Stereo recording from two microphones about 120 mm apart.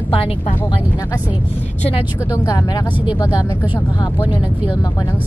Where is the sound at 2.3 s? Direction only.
30° left (ahead or behind).